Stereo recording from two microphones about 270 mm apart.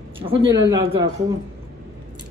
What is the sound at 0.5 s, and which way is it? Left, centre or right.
Speech, centre.